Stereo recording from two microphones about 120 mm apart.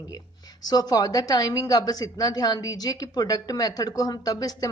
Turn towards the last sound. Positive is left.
turn(degrees=30)  # may be behind; listen again after turning